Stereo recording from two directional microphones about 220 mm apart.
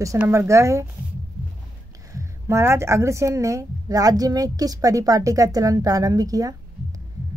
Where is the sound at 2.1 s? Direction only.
10° right (ahead or behind).